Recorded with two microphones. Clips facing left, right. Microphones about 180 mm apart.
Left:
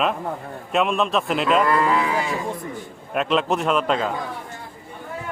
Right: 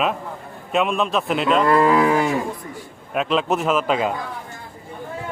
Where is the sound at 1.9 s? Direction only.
50° right (ahead or behind).